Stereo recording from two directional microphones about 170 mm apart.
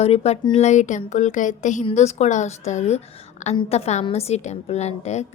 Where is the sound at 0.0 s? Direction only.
40° left (ahead or behind).